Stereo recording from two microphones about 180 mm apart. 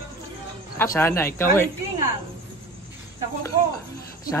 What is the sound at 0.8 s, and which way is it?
Speech, 15° left (ahead or behind).